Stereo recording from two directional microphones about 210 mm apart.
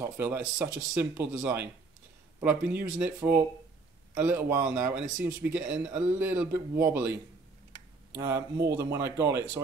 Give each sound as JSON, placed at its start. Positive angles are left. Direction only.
{"t": 0.0, "sound": "speech", "side_deg": -10}
{"t": 8.2, "sound": "speech", "side_deg": -15}